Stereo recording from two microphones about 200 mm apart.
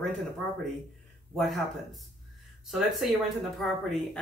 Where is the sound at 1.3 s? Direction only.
Centre (ahead or behind).